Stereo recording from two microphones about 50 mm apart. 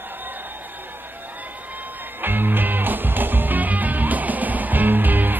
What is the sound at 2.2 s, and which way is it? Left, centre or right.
Music, right.